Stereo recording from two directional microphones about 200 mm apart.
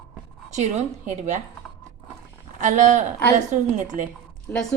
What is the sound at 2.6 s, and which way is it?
Speech, 40° right (ahead or behind).